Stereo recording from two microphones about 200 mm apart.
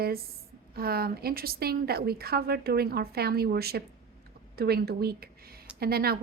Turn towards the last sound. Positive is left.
turn(degrees=-50)  # may be behind; listen again after turning